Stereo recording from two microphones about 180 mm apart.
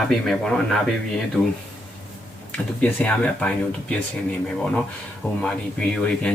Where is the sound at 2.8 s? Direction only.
10° left (ahead or behind).